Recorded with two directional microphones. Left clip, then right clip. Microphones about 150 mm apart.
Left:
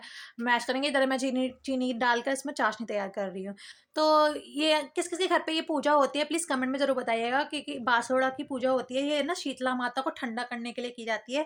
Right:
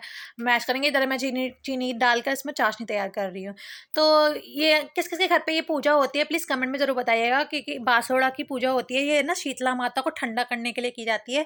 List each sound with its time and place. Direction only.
0.3 s speech: 15° right (ahead or behind)